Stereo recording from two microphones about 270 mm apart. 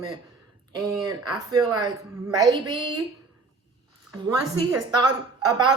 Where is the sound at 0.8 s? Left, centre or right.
Centre.